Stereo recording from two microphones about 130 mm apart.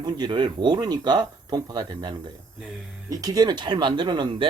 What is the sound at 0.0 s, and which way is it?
Speech, 35° right (ahead or behind).